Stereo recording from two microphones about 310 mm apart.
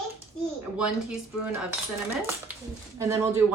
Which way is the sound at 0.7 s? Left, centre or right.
Centre.